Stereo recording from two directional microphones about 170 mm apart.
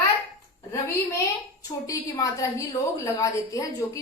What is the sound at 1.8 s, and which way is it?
A woman's voice, 20° left (ahead or behind).